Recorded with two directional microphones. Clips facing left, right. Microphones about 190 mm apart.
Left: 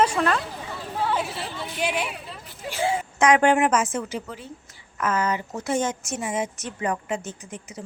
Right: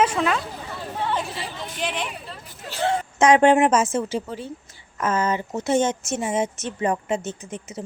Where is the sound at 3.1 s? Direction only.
25° right (ahead or behind).